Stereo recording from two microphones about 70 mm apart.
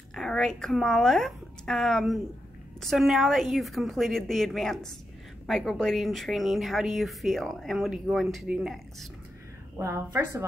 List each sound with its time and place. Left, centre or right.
0.1 s a woman's voice: centre
9.8 s a woman's voice: right